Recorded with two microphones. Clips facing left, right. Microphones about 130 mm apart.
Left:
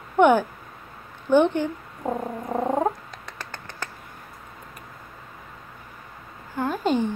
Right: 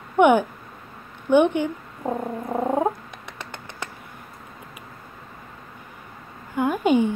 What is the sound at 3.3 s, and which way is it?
Finger snapping, 20° right (ahead or behind).